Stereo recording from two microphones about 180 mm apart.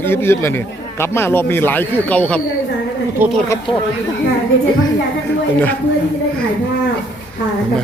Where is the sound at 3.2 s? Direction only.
10° right (ahead or behind).